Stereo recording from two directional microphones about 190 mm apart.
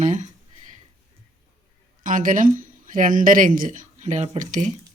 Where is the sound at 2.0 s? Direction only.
45° right (ahead or behind).